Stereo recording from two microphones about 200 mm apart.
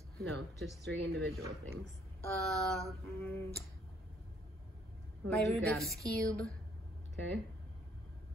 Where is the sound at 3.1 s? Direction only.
15° left (ahead or behind).